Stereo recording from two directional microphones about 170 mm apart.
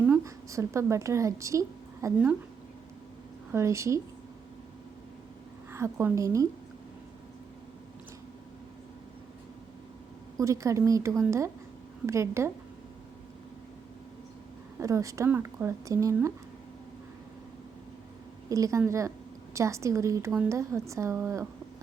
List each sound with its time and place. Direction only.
0.0 s a woman's voice: 15° right (ahead or behind)
3.5 s a woman's voice: 15° right (ahead or behind)
5.7 s a woman's voice: 15° right (ahead or behind)
10.3 s a woman's voice: 20° right (ahead or behind)
14.8 s a woman's voice: 20° right (ahead or behind)
18.4 s a woman's voice: 20° right (ahead or behind)